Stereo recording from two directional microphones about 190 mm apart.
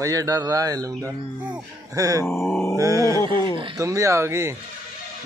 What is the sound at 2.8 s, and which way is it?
Speech, 15° right (ahead or behind).